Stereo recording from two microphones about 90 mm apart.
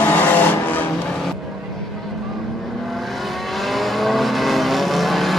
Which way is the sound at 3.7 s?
Centre (ahead or behind).